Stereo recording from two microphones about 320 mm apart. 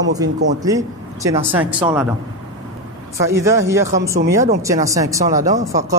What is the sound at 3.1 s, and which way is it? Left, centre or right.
Speech, centre.